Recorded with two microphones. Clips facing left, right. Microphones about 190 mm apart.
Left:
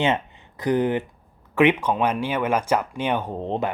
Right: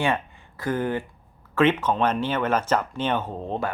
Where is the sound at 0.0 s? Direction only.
20° left (ahead or behind).